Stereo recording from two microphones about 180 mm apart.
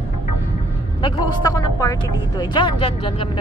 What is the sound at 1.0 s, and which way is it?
Speech, 25° left (ahead or behind).